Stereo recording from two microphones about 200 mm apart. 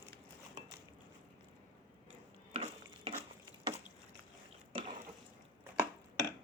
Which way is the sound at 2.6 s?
30° right (ahead or behind).